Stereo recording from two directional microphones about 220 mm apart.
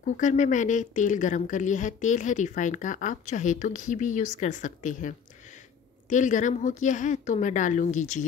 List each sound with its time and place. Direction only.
0.0 s speech: 35° left (ahead or behind)